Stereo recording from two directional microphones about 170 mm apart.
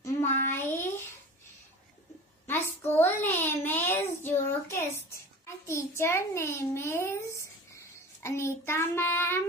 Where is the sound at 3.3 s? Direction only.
10° left (ahead or behind).